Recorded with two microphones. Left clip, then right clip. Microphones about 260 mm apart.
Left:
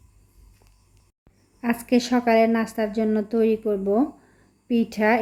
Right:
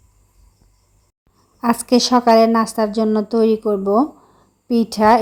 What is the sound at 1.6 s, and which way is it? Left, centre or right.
A woman's voice, right.